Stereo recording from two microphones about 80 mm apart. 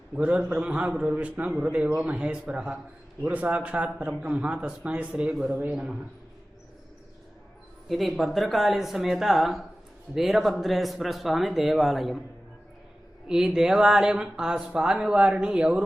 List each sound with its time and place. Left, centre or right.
0.2 s speech: centre
7.9 s speech: centre
13.2 s speech: centre